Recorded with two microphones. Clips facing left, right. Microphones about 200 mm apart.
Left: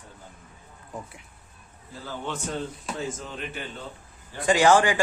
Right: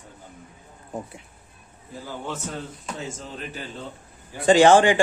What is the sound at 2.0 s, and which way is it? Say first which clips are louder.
Speech: even; 10° right (ahead or behind).